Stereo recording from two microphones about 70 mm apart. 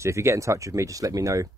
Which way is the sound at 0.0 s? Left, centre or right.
Right.